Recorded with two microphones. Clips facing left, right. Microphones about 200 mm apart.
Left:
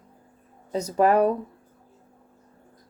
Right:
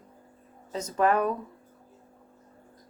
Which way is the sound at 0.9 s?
35° left (ahead or behind).